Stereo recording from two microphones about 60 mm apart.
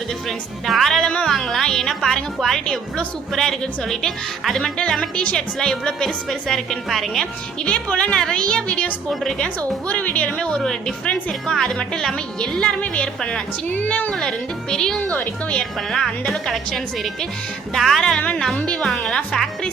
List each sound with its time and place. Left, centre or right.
0.3 s a woman's voice: centre
7.6 s a woman's voice: centre
9.0 s a woman's voice: centre
9.9 s a woman's voice: left
13.7 s a sound: left
14.2 s a woman's voice: centre
18.5 s a woman's voice: left
18.9 s speech: centre